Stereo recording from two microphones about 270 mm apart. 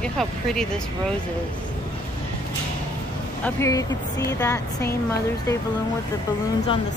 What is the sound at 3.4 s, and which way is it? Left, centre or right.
Speech, centre.